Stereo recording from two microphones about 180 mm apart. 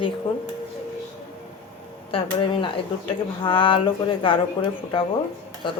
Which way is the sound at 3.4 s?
30° left (ahead or behind).